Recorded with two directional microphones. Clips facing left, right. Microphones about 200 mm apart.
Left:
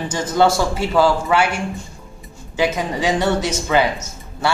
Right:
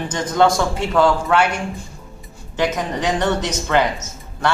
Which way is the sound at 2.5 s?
10° left (ahead or behind).